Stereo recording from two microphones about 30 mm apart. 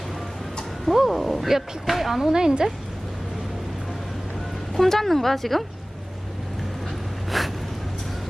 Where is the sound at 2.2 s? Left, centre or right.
Right.